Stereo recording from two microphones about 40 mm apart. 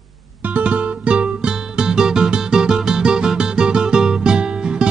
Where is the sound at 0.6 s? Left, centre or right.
Right.